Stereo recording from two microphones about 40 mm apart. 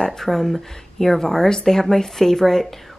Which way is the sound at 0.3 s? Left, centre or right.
Centre.